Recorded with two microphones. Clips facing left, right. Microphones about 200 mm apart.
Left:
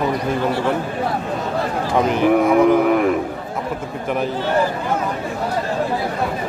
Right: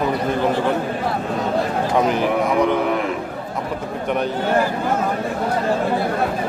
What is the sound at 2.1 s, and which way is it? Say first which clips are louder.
Speech: left 4 dB; centre (ahead or behind).